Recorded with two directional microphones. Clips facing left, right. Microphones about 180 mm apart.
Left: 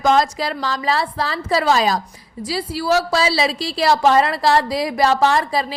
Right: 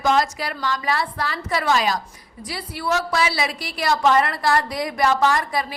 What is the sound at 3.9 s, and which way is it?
A woman's voice, 30° left (ahead or behind).